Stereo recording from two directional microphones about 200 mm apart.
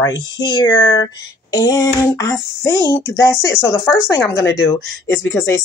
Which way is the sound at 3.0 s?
15° left (ahead or behind).